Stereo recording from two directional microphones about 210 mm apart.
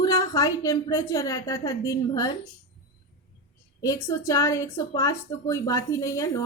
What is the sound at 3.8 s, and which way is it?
A woman's voice, 15° left (ahead or behind).